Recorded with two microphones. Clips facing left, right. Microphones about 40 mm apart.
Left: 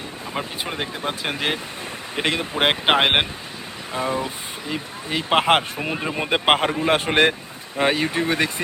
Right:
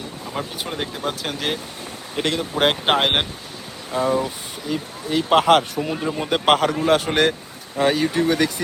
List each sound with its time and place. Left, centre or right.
0.6 s speech: centre; by 8.6 s left